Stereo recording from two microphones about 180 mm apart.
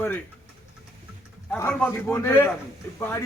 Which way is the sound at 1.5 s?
10° left (ahead or behind).